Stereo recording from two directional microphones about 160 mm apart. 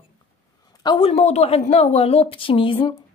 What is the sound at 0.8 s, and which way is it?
A woman's voice, 35° left (ahead or behind).